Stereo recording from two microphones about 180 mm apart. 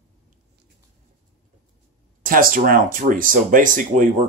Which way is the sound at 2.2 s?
50° right (ahead or behind).